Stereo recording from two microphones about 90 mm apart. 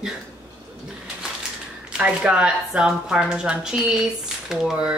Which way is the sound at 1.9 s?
10° right (ahead or behind).